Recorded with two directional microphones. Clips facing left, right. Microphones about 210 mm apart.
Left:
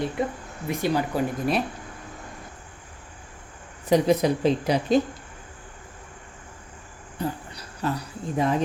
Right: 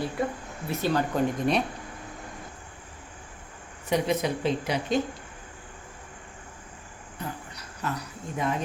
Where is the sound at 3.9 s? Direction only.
35° left (ahead or behind).